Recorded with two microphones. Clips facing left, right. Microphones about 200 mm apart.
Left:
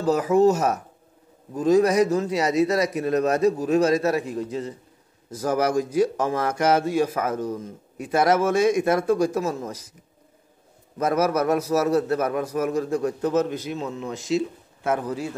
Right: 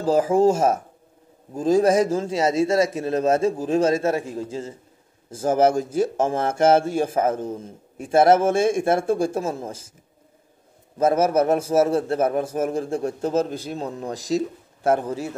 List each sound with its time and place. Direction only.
0.0 s a man's voice: 30° right (ahead or behind)
11.0 s a man's voice: 25° right (ahead or behind)